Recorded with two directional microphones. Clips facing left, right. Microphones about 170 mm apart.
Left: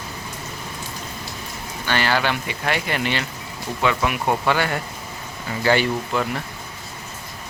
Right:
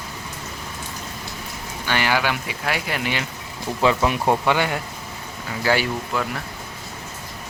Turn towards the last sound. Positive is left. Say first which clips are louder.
# left 2 dB
turn(degrees=-5)  # may be behind; listen again after turning